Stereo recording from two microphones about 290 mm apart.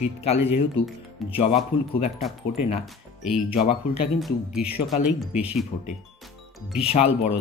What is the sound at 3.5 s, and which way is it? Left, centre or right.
Speech, centre.